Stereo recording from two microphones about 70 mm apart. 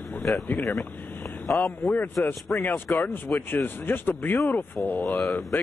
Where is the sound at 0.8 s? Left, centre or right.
Left.